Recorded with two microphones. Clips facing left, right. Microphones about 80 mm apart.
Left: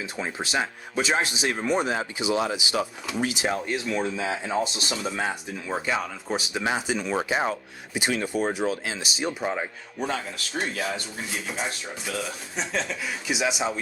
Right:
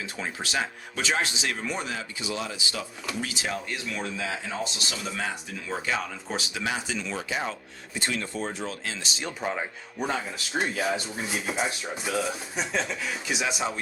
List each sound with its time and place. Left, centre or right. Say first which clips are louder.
0.0 s speech: left 3 dB; centre
6.5 s speech: left 5 dB; left
7.9 s speech: left 5 dB; centre
10.0 s speech: even; centre
12.1 s speech: right 3 dB; centre
13.2 s speech: left 4 dB; centre